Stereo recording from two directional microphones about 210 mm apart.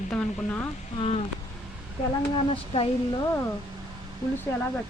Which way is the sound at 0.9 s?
30° left (ahead or behind).